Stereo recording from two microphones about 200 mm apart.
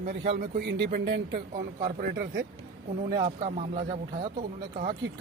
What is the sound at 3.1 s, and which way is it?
Speech, 25° right (ahead or behind).